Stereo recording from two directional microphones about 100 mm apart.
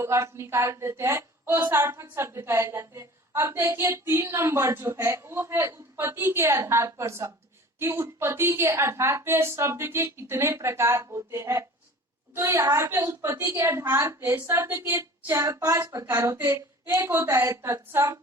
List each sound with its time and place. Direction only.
0.0 s a woman's voice: 25° right (ahead or behind)